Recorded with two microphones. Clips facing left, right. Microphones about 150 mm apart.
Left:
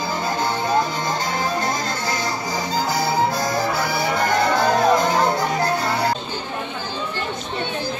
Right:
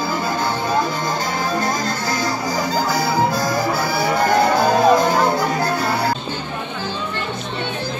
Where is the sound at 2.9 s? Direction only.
20° left (ahead or behind).